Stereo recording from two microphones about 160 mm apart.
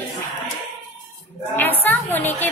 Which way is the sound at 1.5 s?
10° left (ahead or behind).